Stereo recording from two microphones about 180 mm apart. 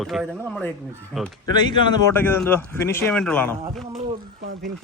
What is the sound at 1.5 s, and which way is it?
Speech, 25° left (ahead or behind).